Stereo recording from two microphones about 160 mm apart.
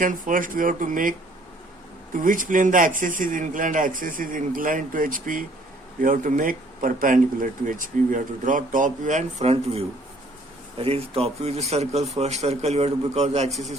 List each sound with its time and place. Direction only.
0.0 s speech: 55° right (ahead or behind)
2.1 s speech: 60° right (ahead or behind)